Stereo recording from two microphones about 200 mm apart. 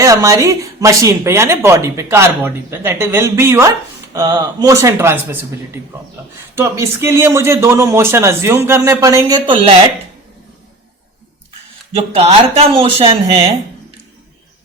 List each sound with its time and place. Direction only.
0.0 s speech: 15° right (ahead or behind)
6.6 s speech: 15° right (ahead or behind)
12.1 s speech: 30° right (ahead or behind)